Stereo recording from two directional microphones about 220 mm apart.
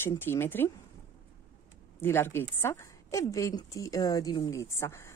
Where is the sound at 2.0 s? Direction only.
10° left (ahead or behind).